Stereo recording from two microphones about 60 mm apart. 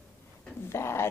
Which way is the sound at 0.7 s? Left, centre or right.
Left.